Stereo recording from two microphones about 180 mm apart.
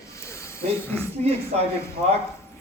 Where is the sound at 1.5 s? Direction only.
35° right (ahead or behind).